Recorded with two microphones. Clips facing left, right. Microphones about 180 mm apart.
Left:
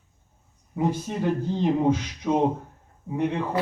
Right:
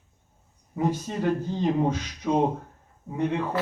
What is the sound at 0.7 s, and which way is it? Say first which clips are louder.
A man's voice: left 1 dB; 15° left (ahead or behind).